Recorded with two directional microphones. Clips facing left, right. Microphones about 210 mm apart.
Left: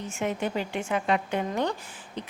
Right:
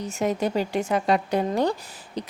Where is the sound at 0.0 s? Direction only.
40° right (ahead or behind).